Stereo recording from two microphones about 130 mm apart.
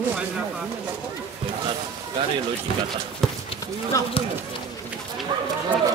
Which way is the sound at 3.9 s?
25° left (ahead or behind).